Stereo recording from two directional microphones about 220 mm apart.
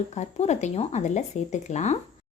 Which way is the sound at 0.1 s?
30° left (ahead or behind).